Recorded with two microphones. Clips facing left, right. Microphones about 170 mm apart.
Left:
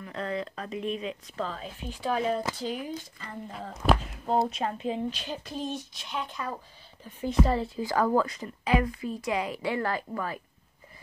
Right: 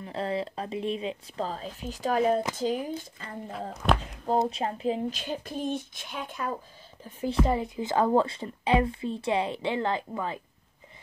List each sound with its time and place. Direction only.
0.0 s speech: 30° right (ahead or behind); by 2.9 s 45° right (ahead or behind)
2.9 s speech: 35° right (ahead or behind)
3.7 s speech: centre (ahead or behind)
4.5 s speech: 30° right (ahead or behind)
5.2 s speech: 50° right (ahead or behind)
7.4 s a woman's voice: 15° right (ahead or behind)